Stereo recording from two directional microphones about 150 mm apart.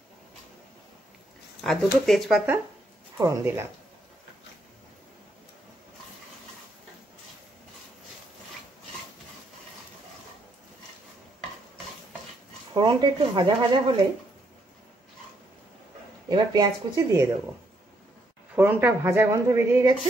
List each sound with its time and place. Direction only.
1.6 s speech: centre (ahead or behind)
3.2 s speech: 20° right (ahead or behind)
12.7 s speech: 30° right (ahead or behind)
16.3 s speech: 30° right (ahead or behind)
18.5 s speech: 10° right (ahead or behind)